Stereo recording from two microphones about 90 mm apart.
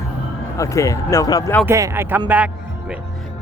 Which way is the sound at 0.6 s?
35° left (ahead or behind).